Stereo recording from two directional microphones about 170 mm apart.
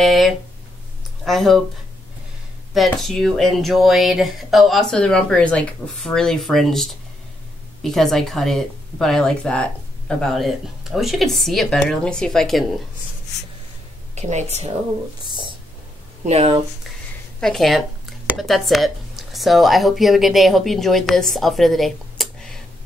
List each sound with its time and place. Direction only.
0.0 s a sound: centre (ahead or behind)
1.2 s speech: centre (ahead or behind)
2.7 s speech: centre (ahead or behind)
14.1 s a woman's voice: 40° right (ahead or behind)
15.2 s a sound: 25° right (ahead or behind)
16.3 s a woman's voice: 40° right (ahead or behind)
17.4 s speech: centre (ahead or behind)